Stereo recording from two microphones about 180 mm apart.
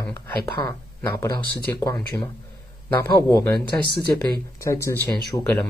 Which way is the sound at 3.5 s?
60° right (ahead or behind).